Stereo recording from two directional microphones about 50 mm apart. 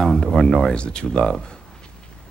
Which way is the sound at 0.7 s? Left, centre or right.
Centre.